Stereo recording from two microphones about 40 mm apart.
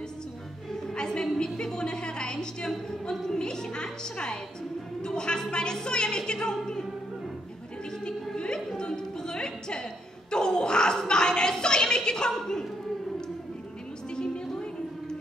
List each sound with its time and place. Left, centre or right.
0.7 s a woman's voice: centre
8.7 s music: centre
10.3 s a sound: centre
14.1 s music: centre